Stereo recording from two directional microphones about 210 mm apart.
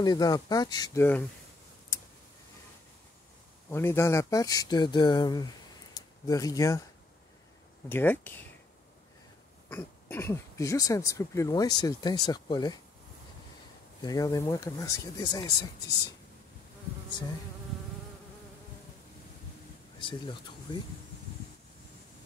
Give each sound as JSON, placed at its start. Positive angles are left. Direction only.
{"t": 0.0, "sound": "speech", "side_deg": 20}
{"t": 3.7, "sound": "speech", "side_deg": 10}
{"t": 7.9, "sound": "speech", "side_deg": 10}
{"t": 9.7, "sound": "speech", "side_deg": 10}
{"t": 14.0, "sound": "speech", "side_deg": 15}
{"t": 20.0, "sound": "speech", "side_deg": 25}